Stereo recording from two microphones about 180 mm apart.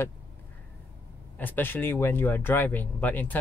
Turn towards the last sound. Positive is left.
turn(degrees=10)  # may be behind; listen again after turning